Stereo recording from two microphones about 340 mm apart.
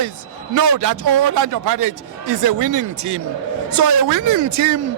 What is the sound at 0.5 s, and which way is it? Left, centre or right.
A man's voice, right.